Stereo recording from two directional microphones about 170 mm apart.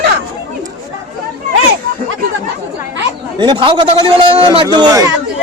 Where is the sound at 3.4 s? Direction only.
25° right (ahead or behind).